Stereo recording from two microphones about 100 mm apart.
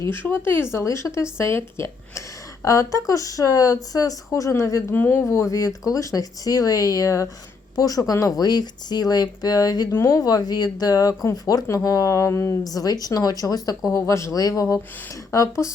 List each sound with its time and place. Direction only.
0.0 s speech: 20° left (ahead or behind); by 9.9 s 40° left (ahead or behind)
9.9 s speech: 25° left (ahead or behind)
10.2 s speech: 40° left (ahead or behind)